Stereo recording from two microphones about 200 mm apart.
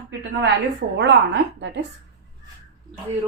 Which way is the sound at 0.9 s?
60° right (ahead or behind).